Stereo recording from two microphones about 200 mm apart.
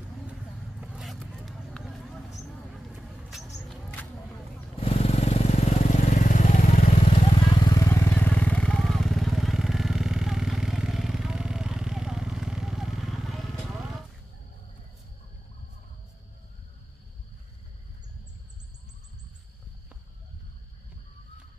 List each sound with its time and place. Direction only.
0.7 s vehicle: centre (ahead or behind)
3.6 s a sound: 5° left (ahead or behind)
4.7 s vehicle: 30° left (ahead or behind)
7.7 s vehicle: 15° left (ahead or behind); by 13.5 s centre (ahead or behind)